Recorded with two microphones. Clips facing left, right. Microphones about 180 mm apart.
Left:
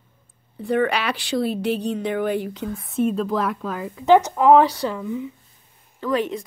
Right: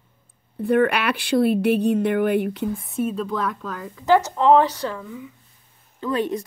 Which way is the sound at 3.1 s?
Centre (ahead or behind).